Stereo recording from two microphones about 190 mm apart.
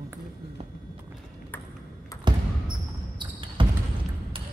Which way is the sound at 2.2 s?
25° right (ahead or behind).